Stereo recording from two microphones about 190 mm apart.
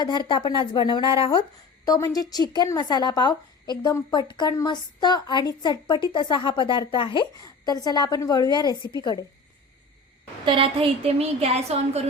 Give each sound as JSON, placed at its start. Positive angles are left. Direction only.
{"t": 0.0, "sound": "speech", "side_deg": 25}
{"t": 10.4, "sound": "a woman's voice", "side_deg": -30}